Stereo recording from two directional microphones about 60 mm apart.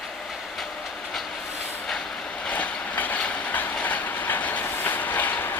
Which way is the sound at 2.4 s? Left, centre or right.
Left.